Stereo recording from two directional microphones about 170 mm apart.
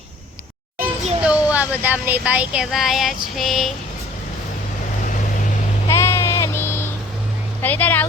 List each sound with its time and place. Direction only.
0.8 s children playing: 40° right (ahead or behind)
1.2 s speech: 5° right (ahead or behind)
3.3 s a sound: centre (ahead or behind)
5.9 s bleat: 15° left (ahead or behind)
7.6 s speech: 10° left (ahead or behind)